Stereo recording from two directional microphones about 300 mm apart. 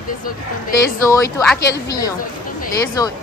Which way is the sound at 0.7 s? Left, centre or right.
Centre.